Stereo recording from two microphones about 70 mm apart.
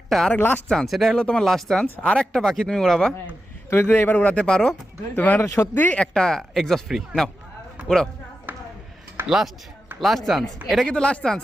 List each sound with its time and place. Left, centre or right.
0.1 s speech: centre
0.3 s a man's voice: left
0.7 s speech: centre
1.8 s speech: centre
3.7 s a man's voice: left
4.1 s speech: left
5.1 s speech: left
5.4 s speech: left
5.7 s speech: left
6.0 s speech: centre
8.5 s a sound: right
9.2 s speech: centre
10.8 s speech: centre